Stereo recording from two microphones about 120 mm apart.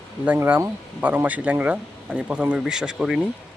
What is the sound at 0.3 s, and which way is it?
Speech, 15° right (ahead or behind).